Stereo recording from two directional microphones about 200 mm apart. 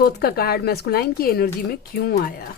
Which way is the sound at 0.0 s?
50° left (ahead or behind).